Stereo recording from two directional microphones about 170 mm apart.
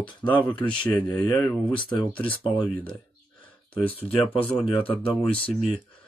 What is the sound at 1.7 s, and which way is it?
Speech, 30° left (ahead or behind).